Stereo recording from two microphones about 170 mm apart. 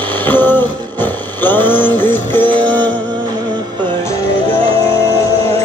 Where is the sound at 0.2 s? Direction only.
10° left (ahead or behind).